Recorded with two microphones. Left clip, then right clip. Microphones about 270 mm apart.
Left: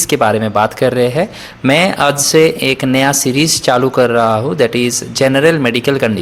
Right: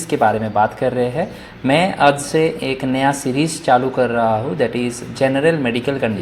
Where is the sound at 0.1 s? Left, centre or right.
Left.